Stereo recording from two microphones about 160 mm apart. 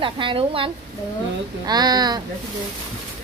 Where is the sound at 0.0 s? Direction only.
30° right (ahead or behind).